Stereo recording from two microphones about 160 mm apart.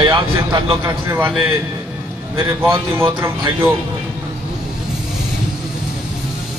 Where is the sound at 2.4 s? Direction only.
15° right (ahead or behind).